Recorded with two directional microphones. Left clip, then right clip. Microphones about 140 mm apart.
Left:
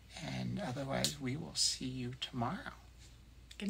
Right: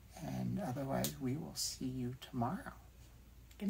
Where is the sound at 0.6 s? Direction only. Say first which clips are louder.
Left 1 dB; 15° left (ahead or behind).